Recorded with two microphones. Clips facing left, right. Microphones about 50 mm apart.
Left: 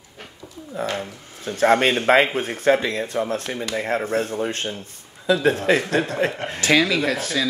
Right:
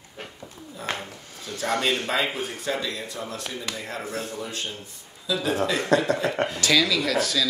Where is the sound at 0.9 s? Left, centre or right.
Left.